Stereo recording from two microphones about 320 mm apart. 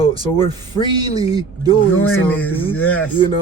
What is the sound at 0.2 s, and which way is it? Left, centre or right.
A man's voice, centre.